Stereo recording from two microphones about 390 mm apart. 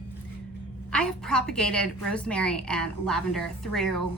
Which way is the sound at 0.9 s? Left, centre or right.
Centre.